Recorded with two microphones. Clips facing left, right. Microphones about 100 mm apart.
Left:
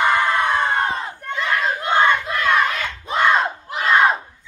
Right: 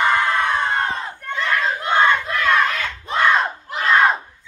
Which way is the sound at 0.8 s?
5° left (ahead or behind).